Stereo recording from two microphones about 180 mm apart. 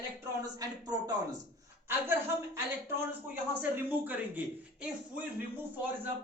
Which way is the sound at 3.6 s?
10° right (ahead or behind).